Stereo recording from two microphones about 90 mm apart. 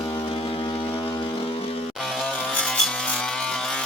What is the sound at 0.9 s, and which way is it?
Vehicle, 80° left.